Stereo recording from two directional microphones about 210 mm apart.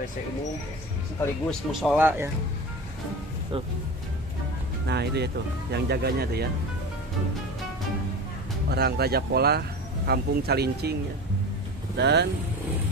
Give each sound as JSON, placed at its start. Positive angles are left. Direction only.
{"t": 1.5, "sound": "speech", "side_deg": 0}
{"t": 4.8, "sound": "speech", "side_deg": -50}
{"t": 8.6, "sound": "speech", "side_deg": -50}
{"t": 12.0, "sound": "speech", "side_deg": -55}